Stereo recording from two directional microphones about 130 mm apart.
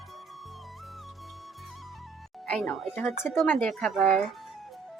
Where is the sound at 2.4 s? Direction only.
5° left (ahead or behind).